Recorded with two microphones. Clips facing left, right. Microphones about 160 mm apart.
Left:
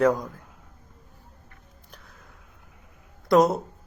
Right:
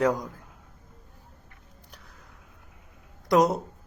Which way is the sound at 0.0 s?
15° right (ahead or behind).